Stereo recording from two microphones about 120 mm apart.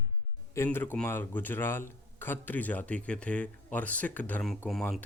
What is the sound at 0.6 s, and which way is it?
Speech, 15° left (ahead or behind).